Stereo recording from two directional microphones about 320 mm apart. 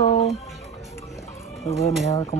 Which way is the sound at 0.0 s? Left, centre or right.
Left.